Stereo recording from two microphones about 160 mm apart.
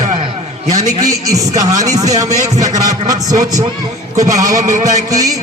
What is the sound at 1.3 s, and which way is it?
A man's voice, 20° right (ahead or behind).